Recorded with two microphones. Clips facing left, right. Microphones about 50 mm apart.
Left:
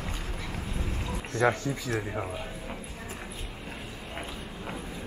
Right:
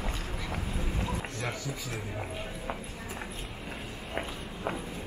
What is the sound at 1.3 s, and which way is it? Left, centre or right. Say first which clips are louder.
Speech: left 10 dB; left.